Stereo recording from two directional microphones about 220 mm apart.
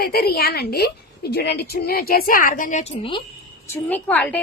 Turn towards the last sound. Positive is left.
turn(degrees=5)  # may be behind; listen again after turning